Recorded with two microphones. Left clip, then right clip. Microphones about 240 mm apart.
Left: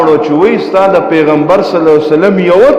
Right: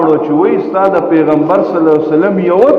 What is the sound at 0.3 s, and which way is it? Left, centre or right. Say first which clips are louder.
A man's voice: left 2 dB; left.